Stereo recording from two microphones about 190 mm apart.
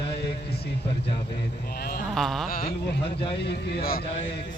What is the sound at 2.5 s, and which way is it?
Speech, 50° left (ahead or behind).